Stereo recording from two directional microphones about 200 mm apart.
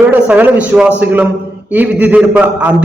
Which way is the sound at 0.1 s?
10° right (ahead or behind).